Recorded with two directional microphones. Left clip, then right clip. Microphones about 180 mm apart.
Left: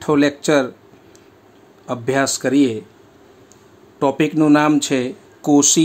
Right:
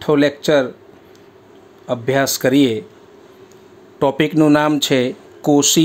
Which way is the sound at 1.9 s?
10° right (ahead or behind).